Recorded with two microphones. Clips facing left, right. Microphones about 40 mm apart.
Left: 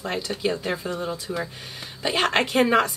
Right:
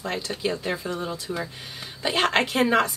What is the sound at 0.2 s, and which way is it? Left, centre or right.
A woman's voice, centre.